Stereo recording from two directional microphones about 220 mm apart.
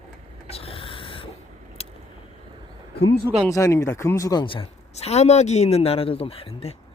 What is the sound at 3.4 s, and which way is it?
A woman's voice, 15° left (ahead or behind).